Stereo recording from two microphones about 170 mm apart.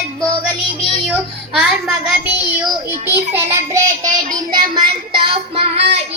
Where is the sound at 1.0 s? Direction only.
Centre (ahead or behind).